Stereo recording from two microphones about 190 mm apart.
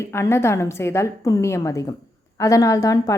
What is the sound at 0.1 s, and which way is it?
A woman's voice, 15° left (ahead or behind).